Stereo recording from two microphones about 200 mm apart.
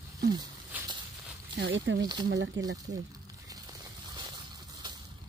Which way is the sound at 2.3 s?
60° right (ahead or behind).